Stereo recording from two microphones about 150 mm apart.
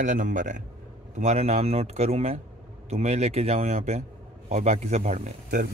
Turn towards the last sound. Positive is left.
turn(degrees=-55)  # may be behind; listen again after turning